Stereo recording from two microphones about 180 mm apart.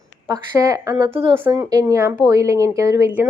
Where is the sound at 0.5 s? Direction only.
20° right (ahead or behind).